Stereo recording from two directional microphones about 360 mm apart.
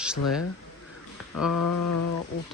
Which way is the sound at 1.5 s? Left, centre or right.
Left.